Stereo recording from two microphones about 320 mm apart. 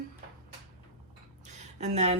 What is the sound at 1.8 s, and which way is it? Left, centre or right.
Speech, centre.